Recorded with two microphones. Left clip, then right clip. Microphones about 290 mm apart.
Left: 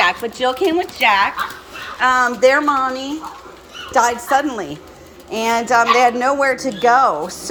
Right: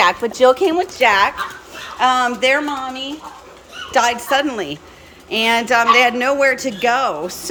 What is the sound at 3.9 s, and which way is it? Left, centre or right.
Speech, centre.